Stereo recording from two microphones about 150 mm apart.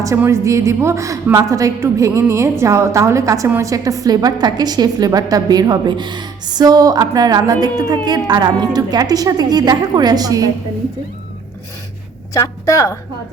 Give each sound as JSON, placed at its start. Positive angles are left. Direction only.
{"t": 0.0, "sound": "a woman's voice", "side_deg": -20}
{"t": 12.3, "sound": "a woman's voice", "side_deg": 20}